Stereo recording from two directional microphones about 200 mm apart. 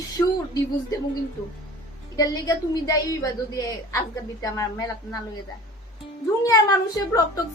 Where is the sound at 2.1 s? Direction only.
20° left (ahead or behind).